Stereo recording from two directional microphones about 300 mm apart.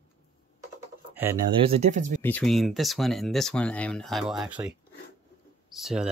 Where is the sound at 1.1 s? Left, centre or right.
Centre.